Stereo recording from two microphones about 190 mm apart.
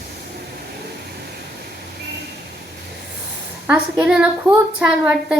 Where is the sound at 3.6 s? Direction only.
5° right (ahead or behind).